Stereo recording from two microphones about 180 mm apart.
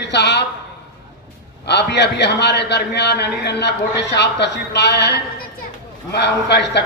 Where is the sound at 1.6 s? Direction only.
70° left (ahead or behind).